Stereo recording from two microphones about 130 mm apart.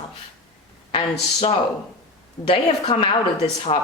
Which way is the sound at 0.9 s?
50° left (ahead or behind).